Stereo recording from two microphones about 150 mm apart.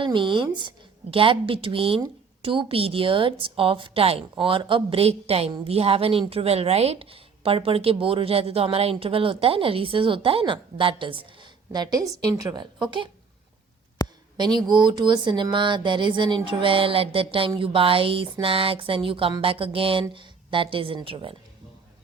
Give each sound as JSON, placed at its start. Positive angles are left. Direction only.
{"t": 0.0, "sound": "a woman's voice", "side_deg": -35}
{"t": 14.0, "sound": "a sound", "side_deg": 25}
{"t": 14.3, "sound": "a woman's voice", "side_deg": -30}